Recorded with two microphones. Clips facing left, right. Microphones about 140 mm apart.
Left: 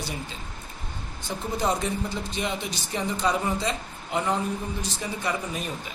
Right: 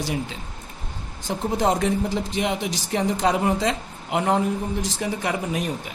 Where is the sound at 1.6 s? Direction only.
90° right.